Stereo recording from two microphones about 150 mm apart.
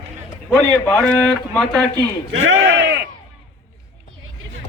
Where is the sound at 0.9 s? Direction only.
5° left (ahead or behind).